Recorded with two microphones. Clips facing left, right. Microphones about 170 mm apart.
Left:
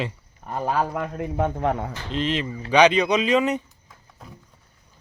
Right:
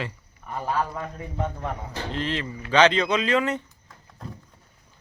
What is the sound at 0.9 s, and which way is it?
Speech, 70° left (ahead or behind).